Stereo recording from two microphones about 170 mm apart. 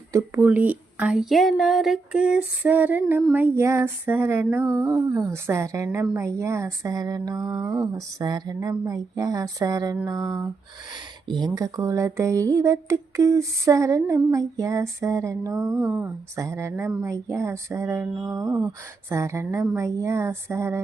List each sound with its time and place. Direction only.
0.1 s a woman's voice: 15° right (ahead or behind)